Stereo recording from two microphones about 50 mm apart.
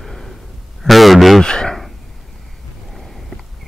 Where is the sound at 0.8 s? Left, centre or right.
Centre.